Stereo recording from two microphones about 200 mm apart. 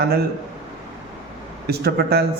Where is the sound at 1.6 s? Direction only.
50° right (ahead or behind).